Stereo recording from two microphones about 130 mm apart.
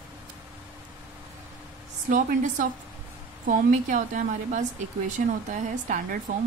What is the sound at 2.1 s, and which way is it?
A woman's voice, 90° right.